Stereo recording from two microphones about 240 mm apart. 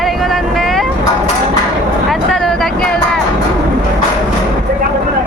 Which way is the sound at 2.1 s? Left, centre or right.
Centre.